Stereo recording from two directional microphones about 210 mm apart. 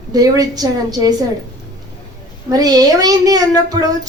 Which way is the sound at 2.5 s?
20° right (ahead or behind).